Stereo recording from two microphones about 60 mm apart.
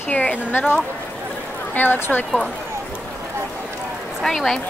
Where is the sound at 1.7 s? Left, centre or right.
Left.